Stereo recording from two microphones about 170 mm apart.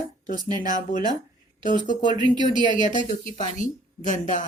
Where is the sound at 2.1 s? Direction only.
25° right (ahead or behind).